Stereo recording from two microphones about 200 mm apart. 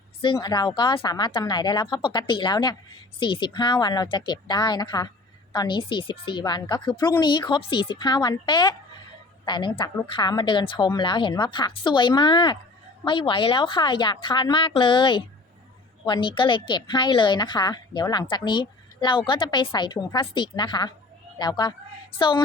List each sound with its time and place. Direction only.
0.2 s a woman's voice: 20° left (ahead or behind)